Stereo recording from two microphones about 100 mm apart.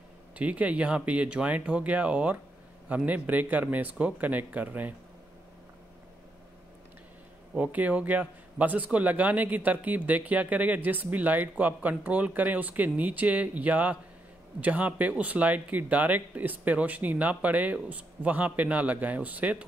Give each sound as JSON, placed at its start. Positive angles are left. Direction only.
{"t": 0.4, "sound": "a man's voice", "side_deg": -15}
{"t": 7.5, "sound": "a man's voice", "side_deg": -15}